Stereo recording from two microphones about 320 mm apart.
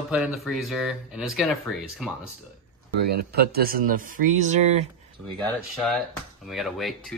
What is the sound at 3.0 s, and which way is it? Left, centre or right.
Speech, right.